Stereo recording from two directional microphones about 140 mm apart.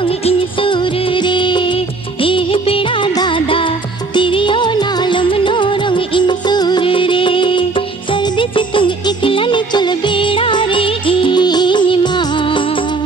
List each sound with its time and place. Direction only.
0.0 s music of bollywood: 40° left (ahead or behind)